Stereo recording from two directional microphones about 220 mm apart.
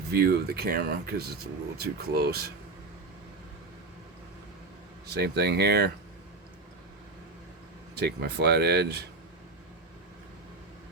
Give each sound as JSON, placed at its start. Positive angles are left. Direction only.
{"t": 0.1, "sound": "speech", "side_deg": -45}
{"t": 5.0, "sound": "speech", "side_deg": -45}
{"t": 7.9, "sound": "speech", "side_deg": -45}